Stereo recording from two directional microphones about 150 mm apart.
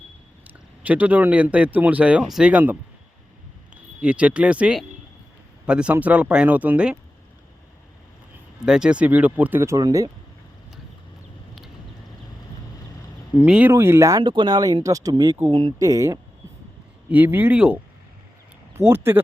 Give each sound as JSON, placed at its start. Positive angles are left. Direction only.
{"t": 0.8, "sound": "speech", "side_deg": -10}
{"t": 4.0, "sound": "speech", "side_deg": -10}
{"t": 8.6, "sound": "speech", "side_deg": -5}
{"t": 13.4, "sound": "speech", "side_deg": -10}
{"t": 17.1, "sound": "speech", "side_deg": -10}